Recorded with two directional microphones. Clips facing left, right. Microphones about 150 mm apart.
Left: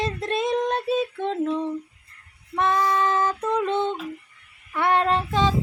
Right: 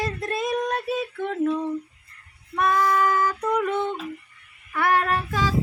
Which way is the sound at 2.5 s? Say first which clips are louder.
Right 1 dB; 25° left (ahead or behind).